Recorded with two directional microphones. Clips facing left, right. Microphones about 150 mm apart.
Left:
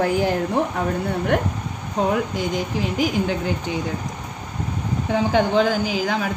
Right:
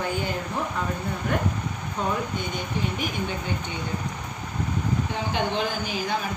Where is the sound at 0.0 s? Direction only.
90° left.